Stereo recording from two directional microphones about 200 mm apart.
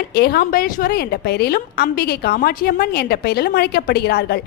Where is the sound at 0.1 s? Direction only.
55° left (ahead or behind).